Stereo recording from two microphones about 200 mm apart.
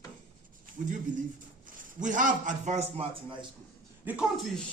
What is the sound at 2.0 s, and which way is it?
A man's voice, 40° right (ahead or behind).